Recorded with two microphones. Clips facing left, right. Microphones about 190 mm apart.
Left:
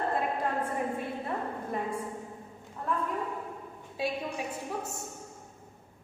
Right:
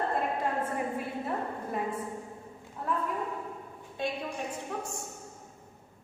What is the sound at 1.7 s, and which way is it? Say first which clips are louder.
Speech: even; centre (ahead or behind).